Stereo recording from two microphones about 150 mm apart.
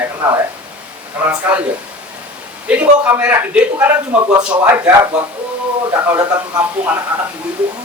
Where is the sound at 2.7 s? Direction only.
10° right (ahead or behind).